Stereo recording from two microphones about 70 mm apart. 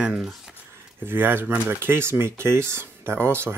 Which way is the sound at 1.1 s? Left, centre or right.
Right.